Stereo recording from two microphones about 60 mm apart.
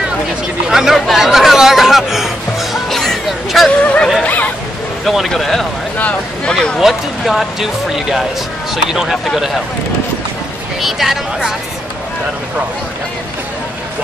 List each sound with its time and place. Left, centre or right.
0.7 s chatter: centre
3.8 s a sound: left
5.0 s speech: centre
5.9 s speech: left
6.5 s speech: centre
6.8 s speech: centre
10.8 s speech: centre